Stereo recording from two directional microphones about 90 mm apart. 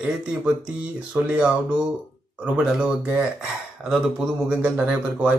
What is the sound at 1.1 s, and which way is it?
Speech, 15° right (ahead or behind).